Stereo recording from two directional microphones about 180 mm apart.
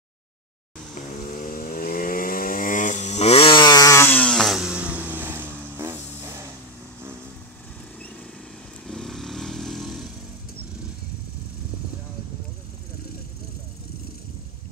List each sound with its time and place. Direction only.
0.9 s vehicle: 45° left (ahead or behind); by 6.3 s 15° right (ahead or behind)
8.8 s vehicle: centre (ahead or behind)